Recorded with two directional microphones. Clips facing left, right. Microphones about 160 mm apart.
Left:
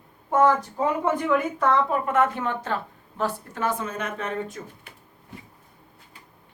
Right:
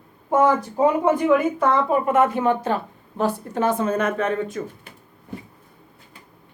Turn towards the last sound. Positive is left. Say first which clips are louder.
# right 9 dB
turn(degrees=-90)